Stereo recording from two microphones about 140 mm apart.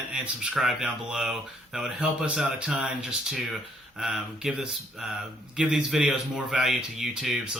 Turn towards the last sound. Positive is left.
turn(degrees=-5)  # may be behind; listen again after turning